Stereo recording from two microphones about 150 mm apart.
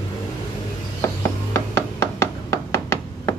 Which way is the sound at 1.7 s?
15° left (ahead or behind).